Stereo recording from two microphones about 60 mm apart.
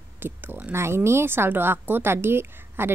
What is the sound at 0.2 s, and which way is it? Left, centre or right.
A woman's voice, right.